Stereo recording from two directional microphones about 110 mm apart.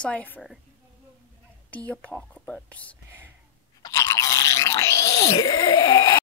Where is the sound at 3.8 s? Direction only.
30° left (ahead or behind).